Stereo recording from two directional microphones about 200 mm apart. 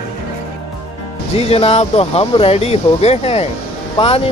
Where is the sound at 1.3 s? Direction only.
30° left (ahead or behind).